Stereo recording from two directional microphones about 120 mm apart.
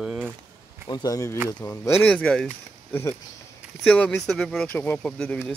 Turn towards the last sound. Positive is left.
turn(degrees=10)  # may be behind; listen again after turning